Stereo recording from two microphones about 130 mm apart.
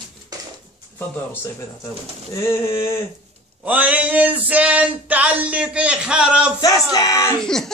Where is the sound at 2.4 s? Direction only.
20° left (ahead or behind).